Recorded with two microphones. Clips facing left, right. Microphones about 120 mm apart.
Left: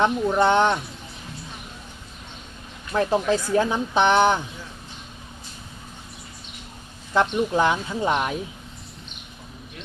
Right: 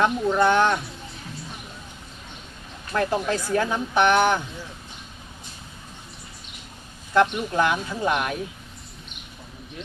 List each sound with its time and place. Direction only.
0.0 s speech: 20° left (ahead or behind)
2.9 s speech: 20° left (ahead or behind)
7.1 s speech: 20° left (ahead or behind)